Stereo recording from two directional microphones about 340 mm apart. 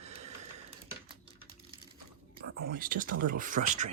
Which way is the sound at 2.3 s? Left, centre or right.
Right.